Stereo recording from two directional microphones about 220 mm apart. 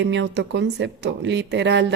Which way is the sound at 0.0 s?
50° right (ahead or behind).